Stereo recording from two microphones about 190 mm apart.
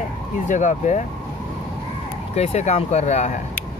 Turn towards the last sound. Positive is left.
turn(degrees=35)  # may be behind; listen again after turning